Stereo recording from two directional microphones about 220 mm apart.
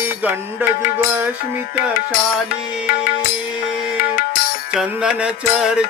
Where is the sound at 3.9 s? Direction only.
40° left (ahead or behind).